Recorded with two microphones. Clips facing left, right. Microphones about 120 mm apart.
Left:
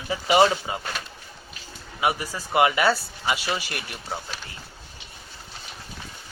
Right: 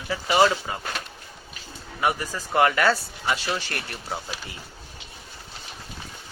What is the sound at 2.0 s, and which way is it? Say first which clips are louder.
Speech: even; 10° left (ahead or behind).